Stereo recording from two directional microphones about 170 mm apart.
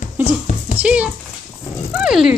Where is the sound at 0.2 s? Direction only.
10° right (ahead or behind).